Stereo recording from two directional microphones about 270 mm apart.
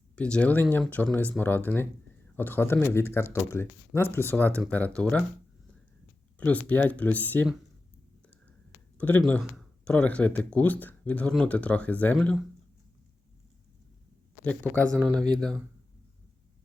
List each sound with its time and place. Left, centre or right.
0.2 s speech: centre
6.4 s speech: centre
9.0 s speech: centre
14.4 s speech: centre